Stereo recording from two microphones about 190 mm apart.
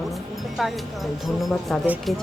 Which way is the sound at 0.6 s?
Centre (ahead or behind).